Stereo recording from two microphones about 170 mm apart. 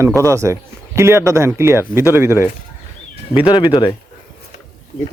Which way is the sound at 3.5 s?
25° left (ahead or behind).